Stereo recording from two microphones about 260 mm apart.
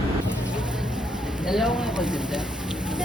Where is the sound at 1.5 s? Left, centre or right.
Centre.